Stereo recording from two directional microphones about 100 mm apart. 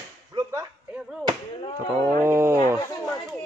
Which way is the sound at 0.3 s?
35° right (ahead or behind).